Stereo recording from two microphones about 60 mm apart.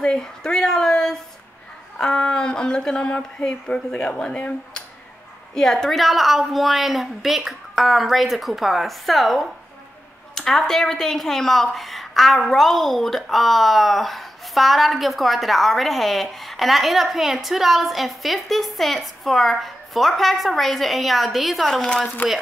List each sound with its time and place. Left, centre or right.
0.0 s a sound: centre
2.0 s speech: centre
5.5 s a woman's voice: centre
21.8 s speech: centre